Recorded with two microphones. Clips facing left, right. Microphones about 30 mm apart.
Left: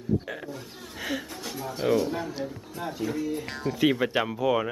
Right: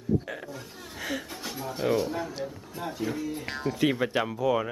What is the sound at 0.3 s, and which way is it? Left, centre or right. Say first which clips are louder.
Speech: left 1 dB; centre.